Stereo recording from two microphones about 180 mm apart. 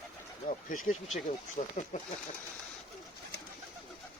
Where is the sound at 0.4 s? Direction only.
45° left (ahead or behind).